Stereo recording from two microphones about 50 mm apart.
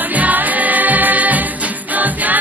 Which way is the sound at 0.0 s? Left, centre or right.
Right.